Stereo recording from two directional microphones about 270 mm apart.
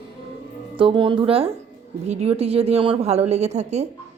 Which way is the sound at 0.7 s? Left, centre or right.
Centre.